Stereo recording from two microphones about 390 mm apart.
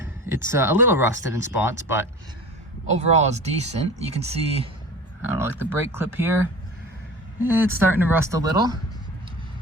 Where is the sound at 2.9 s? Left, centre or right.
Centre.